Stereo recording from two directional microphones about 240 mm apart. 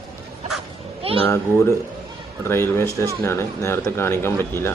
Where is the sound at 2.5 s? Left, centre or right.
Centre.